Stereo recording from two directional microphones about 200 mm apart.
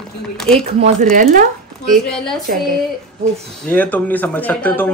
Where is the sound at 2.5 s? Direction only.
45° right (ahead or behind).